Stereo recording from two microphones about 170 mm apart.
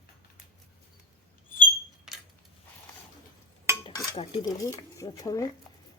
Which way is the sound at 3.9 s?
30° left (ahead or behind).